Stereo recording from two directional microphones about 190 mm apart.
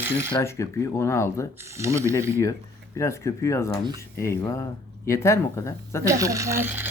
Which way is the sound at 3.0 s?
15° left (ahead or behind).